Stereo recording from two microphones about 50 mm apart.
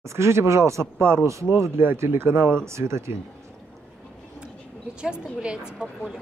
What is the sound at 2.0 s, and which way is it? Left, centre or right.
Speech, right.